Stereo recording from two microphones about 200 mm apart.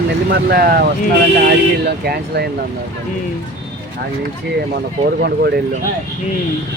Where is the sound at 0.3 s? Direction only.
50° right (ahead or behind).